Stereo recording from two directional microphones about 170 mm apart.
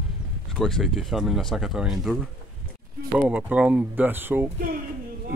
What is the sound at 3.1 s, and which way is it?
Speech, 10° right (ahead or behind).